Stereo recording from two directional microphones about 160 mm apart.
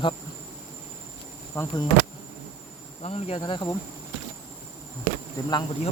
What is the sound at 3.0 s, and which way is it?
Insect, 40° left (ahead or behind).